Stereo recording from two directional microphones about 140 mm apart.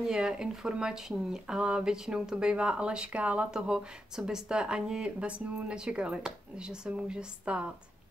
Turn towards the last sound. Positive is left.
turn(degrees=-10)  # may be behind; listen again after turning